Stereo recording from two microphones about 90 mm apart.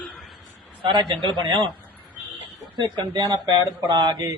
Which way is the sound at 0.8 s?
60° right (ahead or behind).